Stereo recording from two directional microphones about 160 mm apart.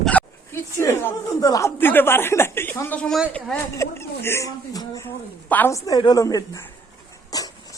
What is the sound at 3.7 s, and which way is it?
Speech, 15° left (ahead or behind).